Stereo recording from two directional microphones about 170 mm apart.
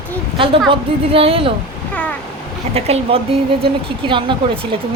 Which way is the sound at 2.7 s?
35° right (ahead or behind).